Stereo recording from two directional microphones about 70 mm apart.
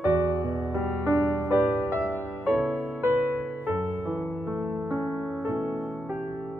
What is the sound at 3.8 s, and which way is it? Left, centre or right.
Music, centre.